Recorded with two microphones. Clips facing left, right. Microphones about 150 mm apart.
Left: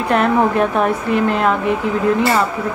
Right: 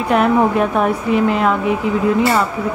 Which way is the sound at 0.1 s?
5° right (ahead or behind).